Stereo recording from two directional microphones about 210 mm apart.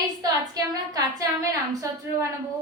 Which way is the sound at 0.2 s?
15° right (ahead or behind).